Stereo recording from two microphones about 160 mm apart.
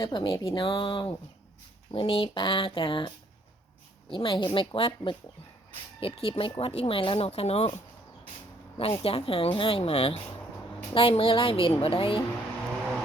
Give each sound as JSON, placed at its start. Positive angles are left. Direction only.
{"t": 0.0, "sound": "speech", "side_deg": 25}
{"t": 4.1, "sound": "speech", "side_deg": 30}
{"t": 8.8, "sound": "speech", "side_deg": 35}